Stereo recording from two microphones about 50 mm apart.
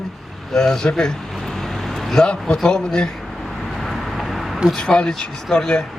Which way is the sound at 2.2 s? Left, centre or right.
Centre.